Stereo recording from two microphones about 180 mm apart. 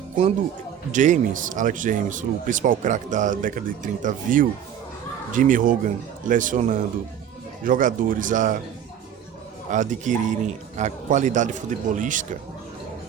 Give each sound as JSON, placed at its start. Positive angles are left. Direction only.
{"t": 0.9, "sound": "a man's voice", "side_deg": -45}
{"t": 9.6, "sound": "a man's voice", "side_deg": -45}